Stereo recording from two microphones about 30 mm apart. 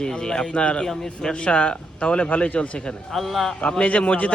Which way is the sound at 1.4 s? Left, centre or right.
Left.